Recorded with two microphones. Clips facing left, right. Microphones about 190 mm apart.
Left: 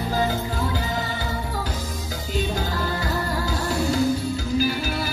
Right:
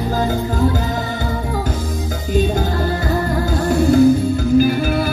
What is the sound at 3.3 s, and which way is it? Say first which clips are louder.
Music: right 8 dB; 55° right (ahead or behind).